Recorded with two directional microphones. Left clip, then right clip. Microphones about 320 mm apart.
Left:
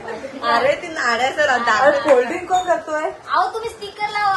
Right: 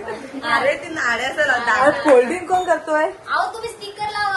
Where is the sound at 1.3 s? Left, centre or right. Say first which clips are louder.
Left 1 dB; left.